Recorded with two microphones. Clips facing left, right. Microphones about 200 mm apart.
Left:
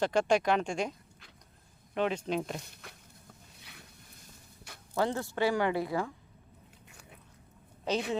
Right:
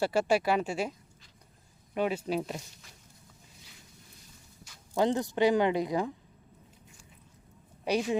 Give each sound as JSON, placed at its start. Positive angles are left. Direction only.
{"t": 0.0, "sound": "speech", "side_deg": -5}
{"t": 2.0, "sound": "speech", "side_deg": -10}
{"t": 2.6, "sound": "speech", "side_deg": 60}
{"t": 3.6, "sound": "a sound", "side_deg": 65}
{"t": 4.9, "sound": "speech", "side_deg": -20}
{"t": 6.8, "sound": "biting", "side_deg": 65}
{"t": 7.9, "sound": "speech", "side_deg": -15}